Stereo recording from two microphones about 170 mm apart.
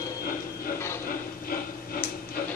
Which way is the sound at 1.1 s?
60° left (ahead or behind).